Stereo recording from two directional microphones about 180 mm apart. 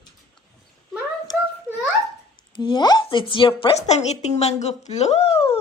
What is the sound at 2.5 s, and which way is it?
A woman's voice, 25° left (ahead or behind).